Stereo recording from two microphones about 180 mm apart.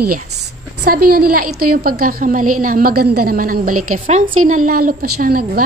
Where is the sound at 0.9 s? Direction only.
55° right (ahead or behind).